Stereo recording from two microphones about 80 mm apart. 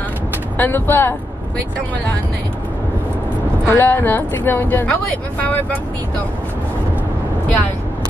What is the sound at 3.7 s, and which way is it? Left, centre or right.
Speech, left.